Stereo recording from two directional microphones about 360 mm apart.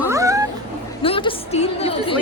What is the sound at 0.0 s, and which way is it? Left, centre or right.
Cat, centre.